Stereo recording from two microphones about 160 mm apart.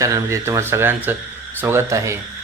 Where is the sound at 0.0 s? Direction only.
20° right (ahead or behind).